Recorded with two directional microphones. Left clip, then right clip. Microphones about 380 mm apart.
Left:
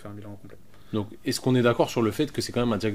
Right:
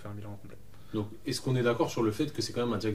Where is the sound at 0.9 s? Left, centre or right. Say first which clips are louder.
Left 5 dB; left.